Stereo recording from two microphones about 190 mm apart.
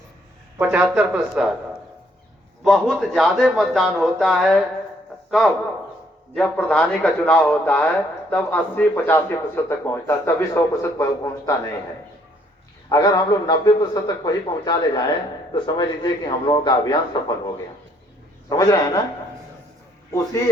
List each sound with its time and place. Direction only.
0.6 s speech: 5° right (ahead or behind)
2.6 s speech: centre (ahead or behind)
6.3 s speech: 5° left (ahead or behind)
12.9 s a man's voice: 20° left (ahead or behind)
18.4 s a man's voice: 20° left (ahead or behind)